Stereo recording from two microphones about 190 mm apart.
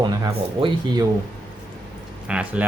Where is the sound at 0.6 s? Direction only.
25° right (ahead or behind).